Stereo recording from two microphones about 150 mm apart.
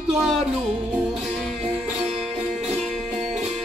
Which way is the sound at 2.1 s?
Centre (ahead or behind).